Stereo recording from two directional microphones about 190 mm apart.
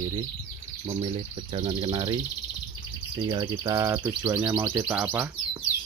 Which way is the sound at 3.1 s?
20° right (ahead or behind).